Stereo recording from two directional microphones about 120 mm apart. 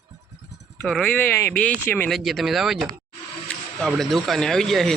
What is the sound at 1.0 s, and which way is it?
Speech, 10° left (ahead or behind).